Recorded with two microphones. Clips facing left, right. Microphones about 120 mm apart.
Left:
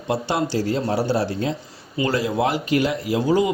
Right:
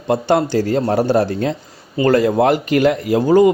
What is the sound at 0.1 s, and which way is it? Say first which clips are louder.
A man's voice: right 7 dB; 50° right (ahead or behind).